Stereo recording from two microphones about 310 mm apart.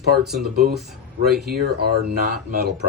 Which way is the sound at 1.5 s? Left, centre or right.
Right.